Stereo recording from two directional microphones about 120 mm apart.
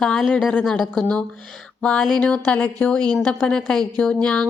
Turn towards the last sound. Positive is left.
turn(degrees=5)  # may be behind; listen again after turning